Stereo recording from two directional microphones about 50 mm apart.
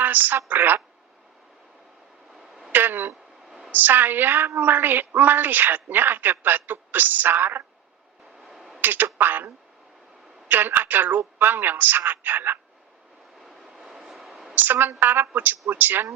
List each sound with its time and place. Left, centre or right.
0.0 s a woman's voice: right
2.7 s a sound: right
3.7 s a woman's voice: right
8.4 s a sound: centre
8.8 s a woman's voice: right
10.5 s a woman's voice: right
13.4 s vehicle: centre
14.0 s a sound: centre
14.5 s a woman's voice: right